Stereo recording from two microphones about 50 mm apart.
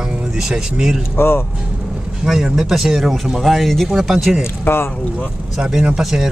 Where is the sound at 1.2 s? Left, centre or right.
Left.